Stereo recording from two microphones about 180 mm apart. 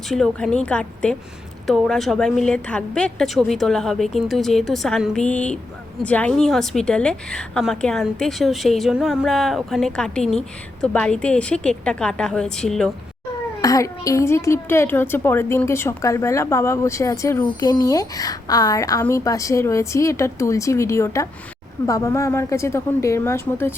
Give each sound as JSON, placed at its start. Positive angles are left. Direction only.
{"t": 0.1, "sound": "a woman's voice", "side_deg": 0}
{"t": 13.6, "sound": "a child's voice", "side_deg": 20}